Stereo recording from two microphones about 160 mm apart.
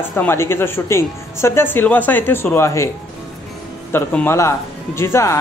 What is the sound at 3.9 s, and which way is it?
Speech, 10° left (ahead or behind).